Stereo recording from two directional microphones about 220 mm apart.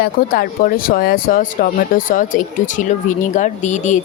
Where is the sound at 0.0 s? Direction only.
40° left (ahead or behind).